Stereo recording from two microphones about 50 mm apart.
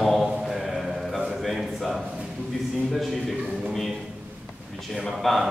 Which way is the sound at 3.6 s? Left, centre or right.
Centre.